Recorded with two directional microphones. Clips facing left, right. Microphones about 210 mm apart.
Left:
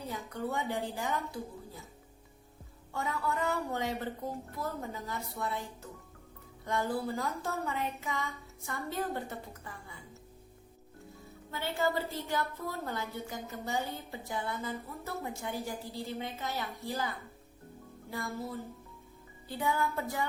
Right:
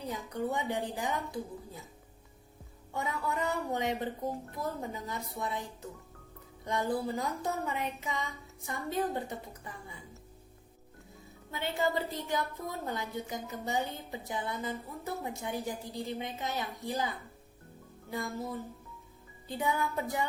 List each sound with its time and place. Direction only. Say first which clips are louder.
0.3 s a woman's voice: right 2 dB; 20° right (ahead or behind)
2.9 s a woman's voice: even; 20° right (ahead or behind)
6.7 s a woman's voice: right 1 dB; 20° right (ahead or behind)
11.5 s a woman's voice: right 1 dB; 20° right (ahead or behind)
18.1 s a woman's voice: right 2 dB; 20° right (ahead or behind)